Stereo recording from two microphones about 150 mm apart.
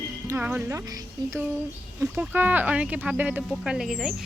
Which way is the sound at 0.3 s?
15° right (ahead or behind).